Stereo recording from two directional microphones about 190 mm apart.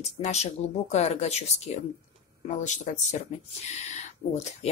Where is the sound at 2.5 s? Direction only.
40° left (ahead or behind).